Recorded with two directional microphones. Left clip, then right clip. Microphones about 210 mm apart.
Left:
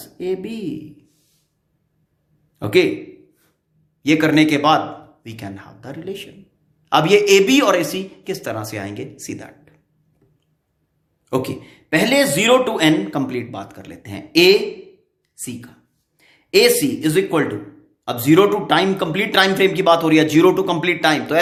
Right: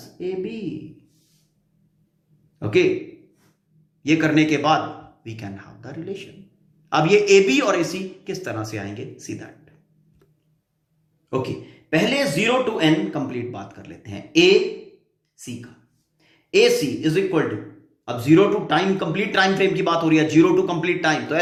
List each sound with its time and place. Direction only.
0.2 s speech: 45° left (ahead or behind)
2.6 s a man's voice: 45° left (ahead or behind)
4.0 s speech: 40° left (ahead or behind)
11.3 s speech: 45° left (ahead or behind)